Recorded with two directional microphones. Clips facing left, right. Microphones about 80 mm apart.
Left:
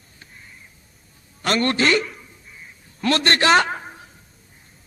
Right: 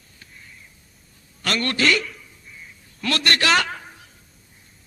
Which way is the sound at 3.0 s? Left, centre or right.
Left.